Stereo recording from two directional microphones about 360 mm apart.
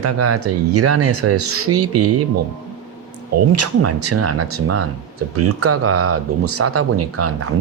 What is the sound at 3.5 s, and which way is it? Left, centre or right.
Speech, right.